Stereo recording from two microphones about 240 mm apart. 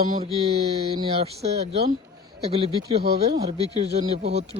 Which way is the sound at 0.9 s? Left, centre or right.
Right.